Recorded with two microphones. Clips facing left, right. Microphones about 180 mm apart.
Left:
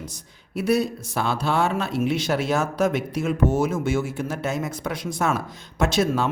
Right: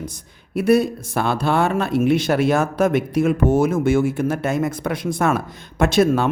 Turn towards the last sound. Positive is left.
turn(degrees=-55)  # may be behind; listen again after turning